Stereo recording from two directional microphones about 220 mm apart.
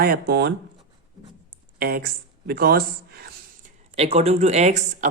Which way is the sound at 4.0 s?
30° right (ahead or behind).